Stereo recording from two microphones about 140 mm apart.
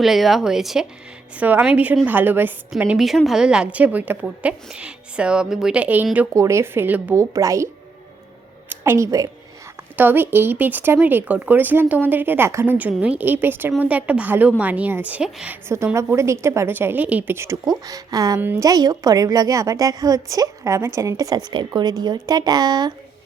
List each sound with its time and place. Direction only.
0.0 s a woman's voice: centre (ahead or behind)
6.3 s a woman's voice: 20° right (ahead or behind)
8.7 s a woman's voice: 20° right (ahead or behind)
9.9 s a woman's voice: 15° right (ahead or behind)
15.7 s a woman's voice: 20° right (ahead or behind)
18.3 s a woman's voice: 15° right (ahead or behind)
18.6 s a woman's voice: 25° right (ahead or behind)